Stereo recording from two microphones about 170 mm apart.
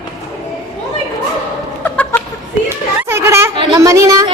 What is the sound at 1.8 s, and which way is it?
Chicken, 10° left (ahead or behind).